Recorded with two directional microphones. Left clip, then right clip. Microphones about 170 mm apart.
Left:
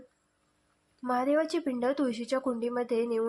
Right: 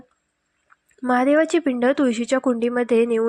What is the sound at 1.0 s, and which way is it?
Speech, 45° right (ahead or behind).